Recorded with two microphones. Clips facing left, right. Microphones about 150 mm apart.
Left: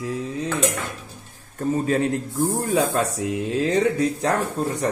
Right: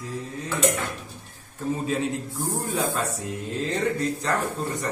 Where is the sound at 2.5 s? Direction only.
90° left.